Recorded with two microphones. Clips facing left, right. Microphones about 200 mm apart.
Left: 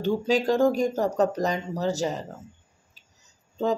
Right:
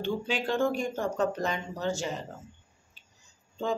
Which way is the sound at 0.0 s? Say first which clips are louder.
Left 7 dB; 40° left (ahead or behind).